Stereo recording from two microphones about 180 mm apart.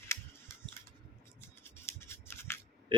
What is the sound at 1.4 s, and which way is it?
Scissors, 15° left (ahead or behind).